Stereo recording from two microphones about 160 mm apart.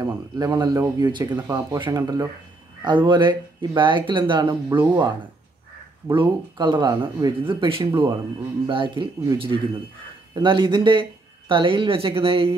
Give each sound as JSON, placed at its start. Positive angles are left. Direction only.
{"t": 0.0, "sound": "speech", "side_deg": -25}